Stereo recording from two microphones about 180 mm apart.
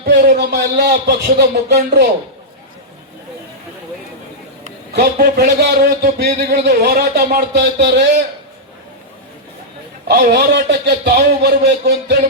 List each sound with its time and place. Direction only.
0.0 s a man's voice: 65° right (ahead or behind)
4.9 s a man's voice: 55° right (ahead or behind)
7.5 s speech: 70° right (ahead or behind)
10.1 s a man's voice: 65° right (ahead or behind)